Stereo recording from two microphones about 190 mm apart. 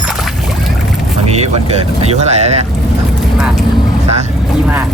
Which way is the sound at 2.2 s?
35° right (ahead or behind).